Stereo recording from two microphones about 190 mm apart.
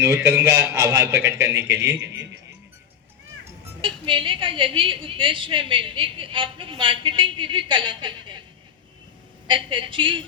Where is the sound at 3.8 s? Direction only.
25° right (ahead or behind).